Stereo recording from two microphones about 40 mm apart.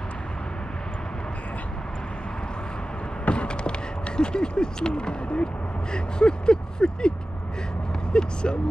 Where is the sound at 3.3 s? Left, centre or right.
Left.